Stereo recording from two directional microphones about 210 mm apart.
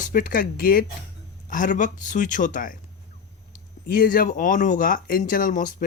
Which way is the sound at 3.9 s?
40° left (ahead or behind).